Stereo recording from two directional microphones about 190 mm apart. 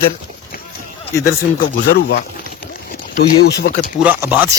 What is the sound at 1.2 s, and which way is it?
Speech, 55° left (ahead or behind).